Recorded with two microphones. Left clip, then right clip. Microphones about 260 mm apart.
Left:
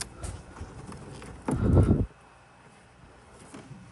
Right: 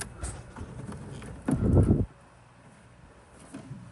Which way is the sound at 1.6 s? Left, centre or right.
Right.